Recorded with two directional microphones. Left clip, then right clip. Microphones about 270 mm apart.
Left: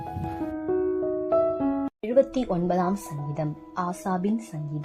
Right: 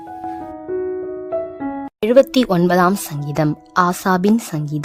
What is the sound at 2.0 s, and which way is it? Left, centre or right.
Speech, right.